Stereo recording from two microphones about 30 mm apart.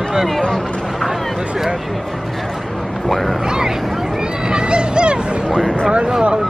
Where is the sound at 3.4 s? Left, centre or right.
Right.